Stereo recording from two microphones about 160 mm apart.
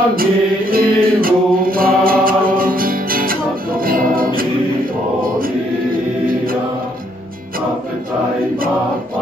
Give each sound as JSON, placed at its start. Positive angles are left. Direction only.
{"t": 0.1, "sound": "mantra", "side_deg": -65}